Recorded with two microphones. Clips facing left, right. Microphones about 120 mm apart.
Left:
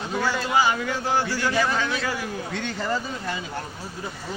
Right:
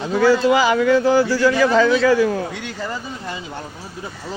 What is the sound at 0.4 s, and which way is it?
A man's voice, 90° right.